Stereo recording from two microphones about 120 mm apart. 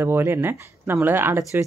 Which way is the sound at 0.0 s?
20° right (ahead or behind).